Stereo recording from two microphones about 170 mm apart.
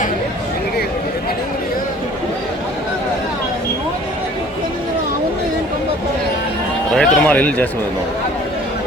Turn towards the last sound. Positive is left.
turn(degrees=10)  # may be behind; listen again after turning